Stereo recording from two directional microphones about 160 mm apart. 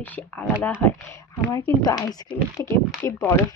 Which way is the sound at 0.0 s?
10° left (ahead or behind).